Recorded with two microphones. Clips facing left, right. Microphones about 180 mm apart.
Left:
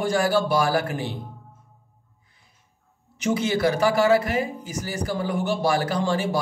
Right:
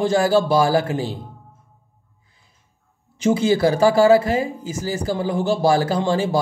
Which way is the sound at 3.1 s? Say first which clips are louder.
Right 6 dB; 30° right (ahead or behind).